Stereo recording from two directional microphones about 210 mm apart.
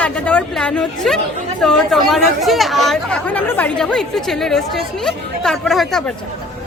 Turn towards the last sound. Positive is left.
turn(degrees=0)  # may be behind; listen again after turning